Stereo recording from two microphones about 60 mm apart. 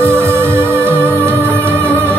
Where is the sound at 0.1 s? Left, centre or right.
Right.